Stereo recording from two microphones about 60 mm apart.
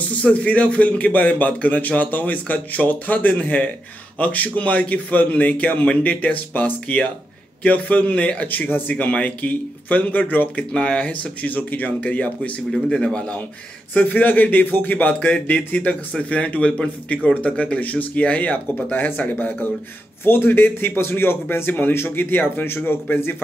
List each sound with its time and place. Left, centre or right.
0.1 s speech: left
8.9 s speech: left
10.7 s speech: centre
12.7 s speech: centre
13.9 s a man's voice: left